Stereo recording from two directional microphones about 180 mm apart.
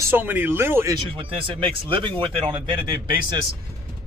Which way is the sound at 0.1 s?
10° right (ahead or behind).